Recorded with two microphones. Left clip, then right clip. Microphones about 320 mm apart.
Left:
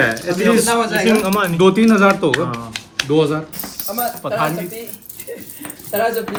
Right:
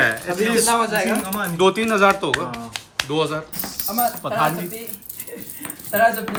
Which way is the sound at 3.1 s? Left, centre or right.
Centre.